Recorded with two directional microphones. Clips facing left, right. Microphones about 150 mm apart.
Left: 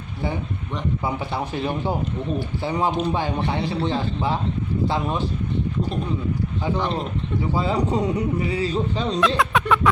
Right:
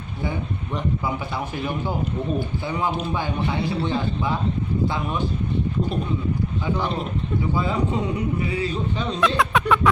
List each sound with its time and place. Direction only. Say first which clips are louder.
1.5 s speech: left 2 dB; 30° left (ahead or behind)
6.7 s a man's voice: left 2 dB; 5° right (ahead or behind)
7.5 s speech: left 3 dB; 35° left (ahead or behind)
9.2 s a sound: right 2 dB; centre (ahead or behind)